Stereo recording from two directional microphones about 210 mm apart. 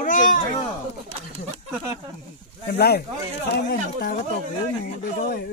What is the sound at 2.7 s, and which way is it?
Speech, 50° left (ahead or behind).